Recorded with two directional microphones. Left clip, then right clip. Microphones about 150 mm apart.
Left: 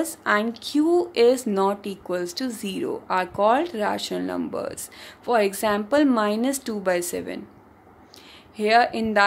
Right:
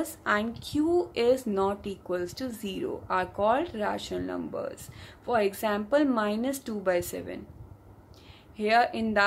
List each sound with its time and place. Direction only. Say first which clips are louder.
0.0 s speech: left 6 dB; 40° left (ahead or behind)
8.5 s speech: left 5 dB; 40° left (ahead or behind)